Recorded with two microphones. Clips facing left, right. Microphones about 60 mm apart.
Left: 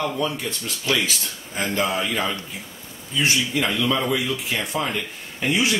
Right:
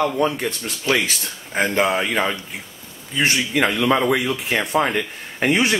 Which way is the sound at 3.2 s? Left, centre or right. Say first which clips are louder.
Right 4 dB; right.